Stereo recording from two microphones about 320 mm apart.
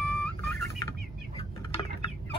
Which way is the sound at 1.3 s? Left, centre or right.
Centre.